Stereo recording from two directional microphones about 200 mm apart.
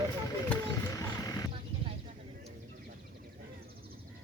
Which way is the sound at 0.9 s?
15° left (ahead or behind).